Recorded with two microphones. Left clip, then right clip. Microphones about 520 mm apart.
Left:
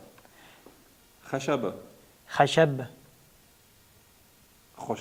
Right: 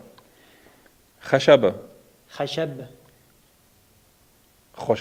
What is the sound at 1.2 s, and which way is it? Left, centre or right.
Speech, right.